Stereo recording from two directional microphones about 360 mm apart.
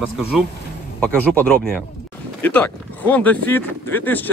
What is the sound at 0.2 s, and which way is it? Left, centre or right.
Speech, centre.